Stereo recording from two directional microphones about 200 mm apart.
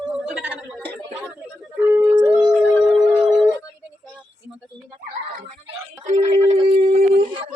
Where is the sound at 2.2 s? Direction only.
5° right (ahead or behind).